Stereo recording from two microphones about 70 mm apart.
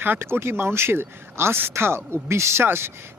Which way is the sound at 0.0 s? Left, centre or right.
Right.